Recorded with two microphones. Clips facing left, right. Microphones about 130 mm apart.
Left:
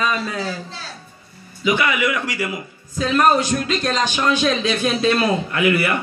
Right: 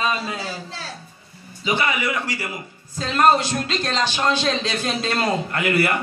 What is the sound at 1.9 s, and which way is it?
Speech, 35° right (ahead or behind).